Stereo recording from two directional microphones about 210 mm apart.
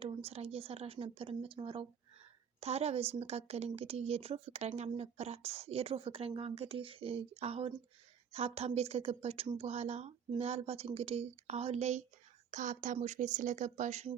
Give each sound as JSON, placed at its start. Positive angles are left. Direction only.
{"t": 0.0, "sound": "a woman's voice", "side_deg": -30}